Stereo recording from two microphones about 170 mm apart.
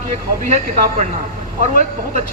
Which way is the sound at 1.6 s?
45° right (ahead or behind).